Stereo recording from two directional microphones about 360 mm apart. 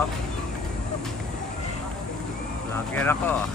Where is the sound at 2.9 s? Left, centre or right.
Centre.